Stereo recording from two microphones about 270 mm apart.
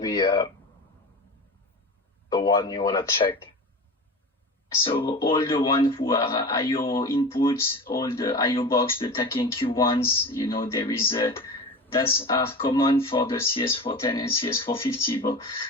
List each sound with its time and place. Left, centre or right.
0.0 s speech: centre
2.3 s speech: centre
4.8 s speech: centre